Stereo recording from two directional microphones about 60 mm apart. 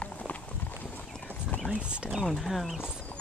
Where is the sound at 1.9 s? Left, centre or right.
Centre.